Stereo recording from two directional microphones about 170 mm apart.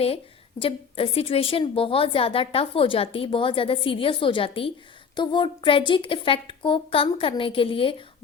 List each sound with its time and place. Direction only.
0.6 s a woman's voice: 35° left (ahead or behind)